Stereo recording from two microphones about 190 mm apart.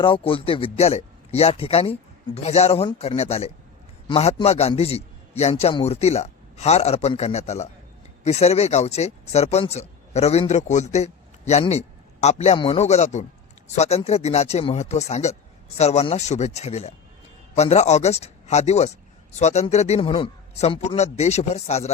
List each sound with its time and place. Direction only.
0.0 s speech: 25° left (ahead or behind)